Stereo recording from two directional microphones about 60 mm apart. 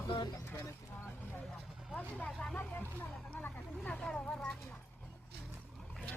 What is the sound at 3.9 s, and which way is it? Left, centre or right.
Vehicle, centre.